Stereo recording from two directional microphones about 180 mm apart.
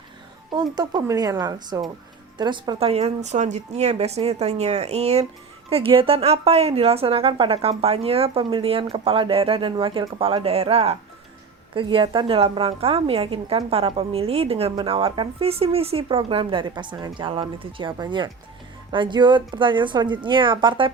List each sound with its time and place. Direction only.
0.5 s a woman's voice: 25° right (ahead or behind)